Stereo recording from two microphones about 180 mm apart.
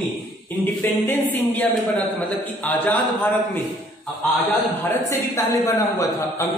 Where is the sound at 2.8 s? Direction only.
10° left (ahead or behind).